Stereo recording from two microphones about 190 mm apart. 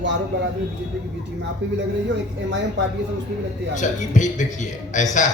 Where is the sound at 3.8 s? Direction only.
40° left (ahead or behind).